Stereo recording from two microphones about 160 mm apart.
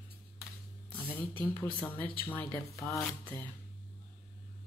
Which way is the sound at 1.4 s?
15° left (ahead or behind).